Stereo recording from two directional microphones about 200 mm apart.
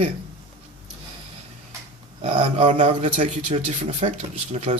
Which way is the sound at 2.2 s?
35° right (ahead or behind).